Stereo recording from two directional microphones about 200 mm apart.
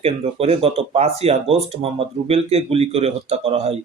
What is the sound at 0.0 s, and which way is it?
Speech, 30° right (ahead or behind).